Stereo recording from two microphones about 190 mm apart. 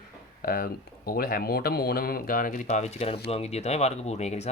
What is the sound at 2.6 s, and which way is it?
Speech, 35° left (ahead or behind).